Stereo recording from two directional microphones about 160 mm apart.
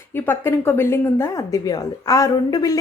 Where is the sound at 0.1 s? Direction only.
15° left (ahead or behind).